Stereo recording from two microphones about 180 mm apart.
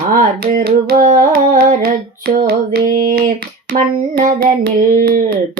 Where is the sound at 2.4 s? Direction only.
55° right (ahead or behind).